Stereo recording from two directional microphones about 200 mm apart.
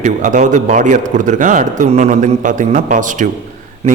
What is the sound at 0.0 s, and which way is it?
A man's voice, 40° right (ahead or behind).